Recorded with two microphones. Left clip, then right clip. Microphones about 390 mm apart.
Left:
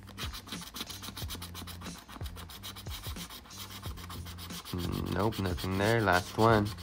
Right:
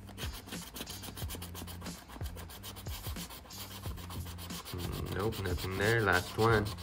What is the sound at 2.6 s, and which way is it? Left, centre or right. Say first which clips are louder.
Rub: left 3 dB; centre.